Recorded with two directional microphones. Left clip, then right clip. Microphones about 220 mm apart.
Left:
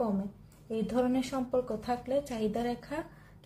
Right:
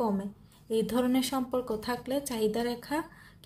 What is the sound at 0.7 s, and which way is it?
A woman's voice, 50° right (ahead or behind).